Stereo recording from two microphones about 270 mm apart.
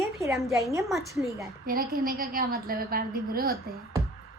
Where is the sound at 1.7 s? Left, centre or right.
Right.